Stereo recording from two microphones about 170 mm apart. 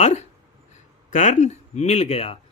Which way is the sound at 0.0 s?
40° left (ahead or behind).